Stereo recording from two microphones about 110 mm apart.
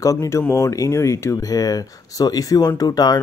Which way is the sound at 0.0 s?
30° left (ahead or behind).